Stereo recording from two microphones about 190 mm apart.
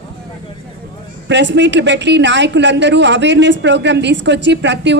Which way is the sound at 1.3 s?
70° right (ahead or behind).